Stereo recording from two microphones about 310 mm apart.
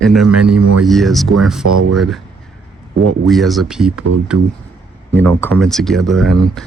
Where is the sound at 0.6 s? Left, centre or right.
Right.